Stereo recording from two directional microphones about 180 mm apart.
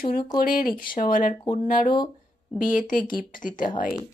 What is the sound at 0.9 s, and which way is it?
Speech, 50° left (ahead or behind).